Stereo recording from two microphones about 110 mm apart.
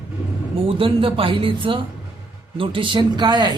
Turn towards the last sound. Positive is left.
turn(degrees=-40)  # may be behind; listen again after turning